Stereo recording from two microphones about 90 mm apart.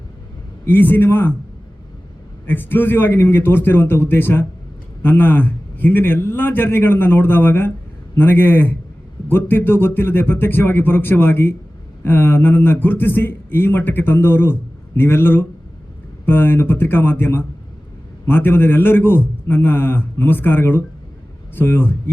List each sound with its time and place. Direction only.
0.6 s a man's voice: 20° left (ahead or behind)
2.5 s a man's voice: 25° left (ahead or behind)